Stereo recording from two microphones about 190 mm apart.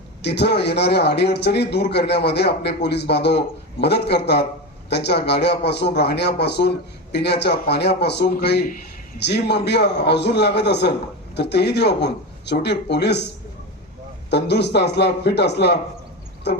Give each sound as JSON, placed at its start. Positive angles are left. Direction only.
{"t": 0.2, "sound": "speech", "side_deg": 60}
{"t": 14.3, "sound": "speech", "side_deg": 60}